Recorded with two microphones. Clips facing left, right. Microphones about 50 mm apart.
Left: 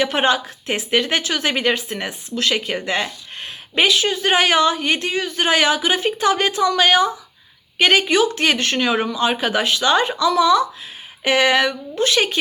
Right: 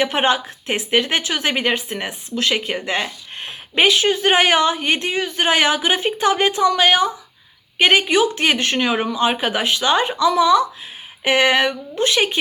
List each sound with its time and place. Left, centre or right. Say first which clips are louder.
0.0 s speech: even; right